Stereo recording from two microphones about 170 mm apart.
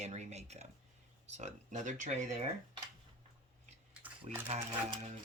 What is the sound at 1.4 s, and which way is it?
Speech, 45° right (ahead or behind).